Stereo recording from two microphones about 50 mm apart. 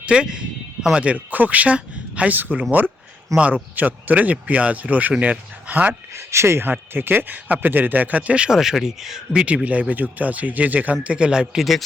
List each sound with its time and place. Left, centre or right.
0.0 s a sound: centre
1.0 s speech: right
2.3 s speech: right
6.1 s speech: right
6.7 s speech: right
8.4 s speech: centre
9.6 s speech: right
11.0 s speech: right